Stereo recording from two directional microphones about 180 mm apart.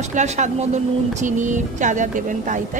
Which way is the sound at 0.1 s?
40° right (ahead or behind).